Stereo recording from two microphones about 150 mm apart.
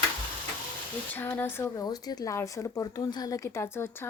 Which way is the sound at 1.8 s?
25° left (ahead or behind).